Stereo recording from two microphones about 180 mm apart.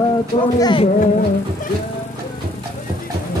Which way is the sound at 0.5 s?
25° left (ahead or behind).